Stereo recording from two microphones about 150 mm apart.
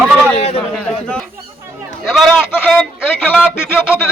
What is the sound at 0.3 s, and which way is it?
Speech, 45° left (ahead or behind).